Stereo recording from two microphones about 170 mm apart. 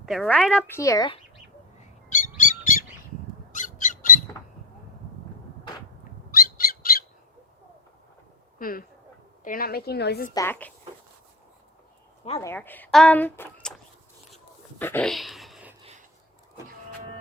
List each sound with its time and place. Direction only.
0.0 s a woman's voice: centre (ahead or behind)
0.8 s speech: 20° left (ahead or behind)
2.0 s bird: 50° left (ahead or behind)
3.5 s squawk: 50° left (ahead or behind)
6.4 s squawk: 60° left (ahead or behind)
8.5 s a woman's voice: 55° left (ahead or behind)
10.3 s a woman's voice: 15° left (ahead or behind)
12.4 s a woman's voice: 15° left (ahead or behind)
14.8 s a woman's voice: 10° left (ahead or behind)
15.1 s a sound: centre (ahead or behind)
15.8 s a sound: 40° right (ahead or behind)